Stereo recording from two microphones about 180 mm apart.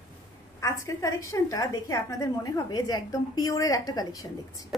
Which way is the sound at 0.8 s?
15° left (ahead or behind).